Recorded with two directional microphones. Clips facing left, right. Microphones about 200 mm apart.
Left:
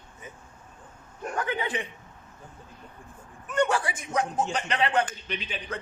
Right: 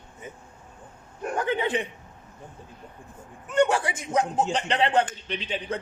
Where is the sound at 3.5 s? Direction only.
25° right (ahead or behind).